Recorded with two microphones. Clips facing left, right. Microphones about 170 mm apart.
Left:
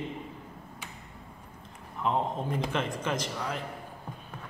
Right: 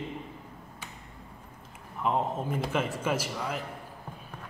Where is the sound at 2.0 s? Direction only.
5° right (ahead or behind).